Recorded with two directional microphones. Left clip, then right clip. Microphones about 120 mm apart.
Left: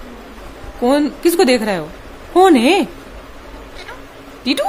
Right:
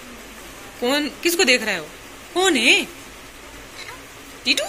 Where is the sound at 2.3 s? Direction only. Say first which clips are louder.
Left 6 dB; 60° left (ahead or behind).